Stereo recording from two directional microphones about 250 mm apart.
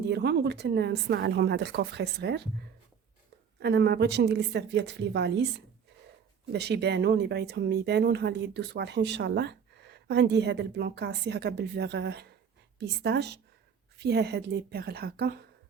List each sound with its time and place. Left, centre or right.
0.1 s speech: right
3.6 s a woman's voice: right